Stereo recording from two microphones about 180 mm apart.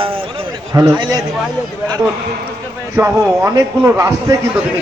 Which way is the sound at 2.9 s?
15° right (ahead or behind).